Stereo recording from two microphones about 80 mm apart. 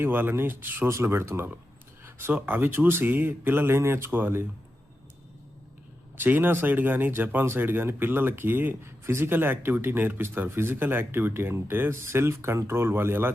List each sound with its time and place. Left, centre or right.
0.0 s speech: right
6.1 s speech: right